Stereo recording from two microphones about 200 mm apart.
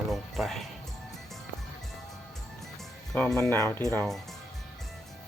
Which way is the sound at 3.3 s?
15° left (ahead or behind).